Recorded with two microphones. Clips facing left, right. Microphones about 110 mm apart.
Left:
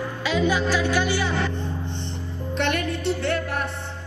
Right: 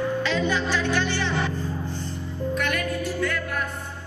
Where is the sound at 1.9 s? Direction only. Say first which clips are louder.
Even; 25° left (ahead or behind).